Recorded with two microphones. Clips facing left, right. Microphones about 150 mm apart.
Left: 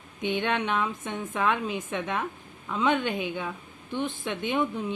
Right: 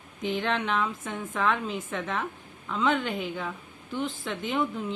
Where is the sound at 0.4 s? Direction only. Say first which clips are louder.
Even; 5° left (ahead or behind).